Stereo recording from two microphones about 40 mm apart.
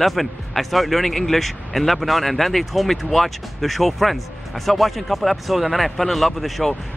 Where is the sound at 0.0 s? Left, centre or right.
Centre.